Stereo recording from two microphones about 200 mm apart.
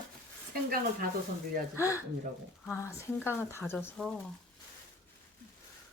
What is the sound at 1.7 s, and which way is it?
Speech, 15° left (ahead or behind).